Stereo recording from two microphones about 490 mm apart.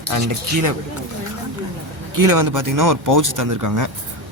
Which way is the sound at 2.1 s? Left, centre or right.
Right.